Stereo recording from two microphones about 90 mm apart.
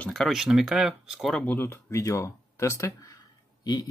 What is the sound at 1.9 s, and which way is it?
Speech, 35° left (ahead or behind).